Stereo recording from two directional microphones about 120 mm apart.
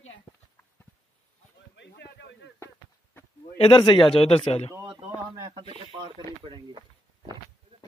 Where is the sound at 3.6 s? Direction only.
50° left (ahead or behind).